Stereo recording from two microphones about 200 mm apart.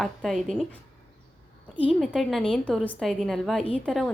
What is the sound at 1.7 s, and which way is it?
Speech, 25° left (ahead or behind).